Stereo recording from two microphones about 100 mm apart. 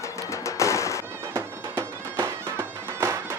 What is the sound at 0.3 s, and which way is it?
Music, 30° left (ahead or behind).